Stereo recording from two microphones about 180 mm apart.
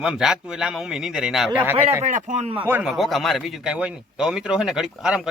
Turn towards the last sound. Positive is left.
turn(degrees=-5)  # may be behind; listen again after turning